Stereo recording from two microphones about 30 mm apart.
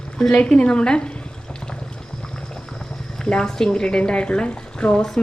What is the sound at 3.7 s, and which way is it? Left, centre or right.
A woman's voice, left.